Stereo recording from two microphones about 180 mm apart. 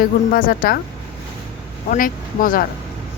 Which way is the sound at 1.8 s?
50° left (ahead or behind).